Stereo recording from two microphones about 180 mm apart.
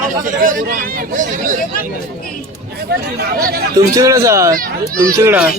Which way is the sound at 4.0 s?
15° right (ahead or behind).